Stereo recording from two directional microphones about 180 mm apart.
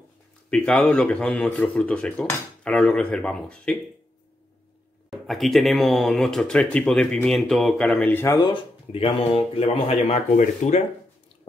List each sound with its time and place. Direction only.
0.5 s speech: 5° left (ahead or behind)
5.1 s speech: centre (ahead or behind)
8.4 s speech: 30° left (ahead or behind)